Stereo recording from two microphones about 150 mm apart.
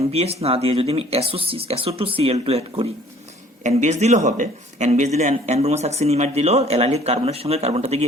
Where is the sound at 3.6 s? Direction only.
55° right (ahead or behind).